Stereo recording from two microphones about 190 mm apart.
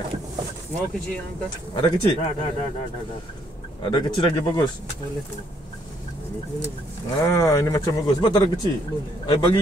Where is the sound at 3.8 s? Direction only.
25° left (ahead or behind).